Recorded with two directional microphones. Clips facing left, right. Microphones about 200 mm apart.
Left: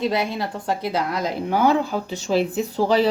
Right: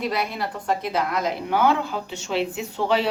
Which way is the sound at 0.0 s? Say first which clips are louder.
Left 3 dB; 25° left (ahead or behind).